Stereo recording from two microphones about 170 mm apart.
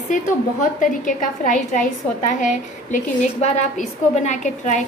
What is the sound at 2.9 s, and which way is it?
A woman's voice, 45° left (ahead or behind).